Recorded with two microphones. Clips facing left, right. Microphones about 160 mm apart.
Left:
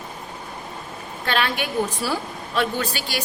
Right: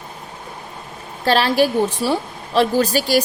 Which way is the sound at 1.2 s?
35° right (ahead or behind).